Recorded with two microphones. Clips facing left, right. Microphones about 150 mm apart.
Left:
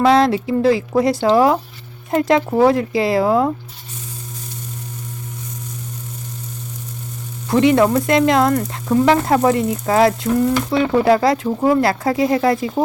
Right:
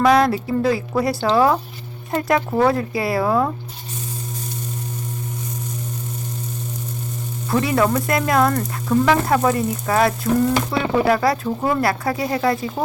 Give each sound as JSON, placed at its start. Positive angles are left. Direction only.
{"t": 0.0, "sound": "frying", "side_deg": 25}
{"t": 7.5, "sound": "frying", "side_deg": 20}
{"t": 11.4, "sound": "speech", "side_deg": 10}
{"t": 11.8, "sound": "frying", "side_deg": 25}